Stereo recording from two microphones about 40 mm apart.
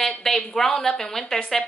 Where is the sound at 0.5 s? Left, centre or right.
Centre.